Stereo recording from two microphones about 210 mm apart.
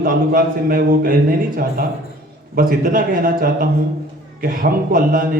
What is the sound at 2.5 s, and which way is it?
A man's voice, 45° right (ahead or behind).